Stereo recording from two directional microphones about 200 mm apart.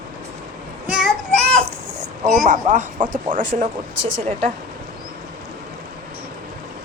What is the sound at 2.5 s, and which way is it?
A woman's voice, 40° right (ahead or behind).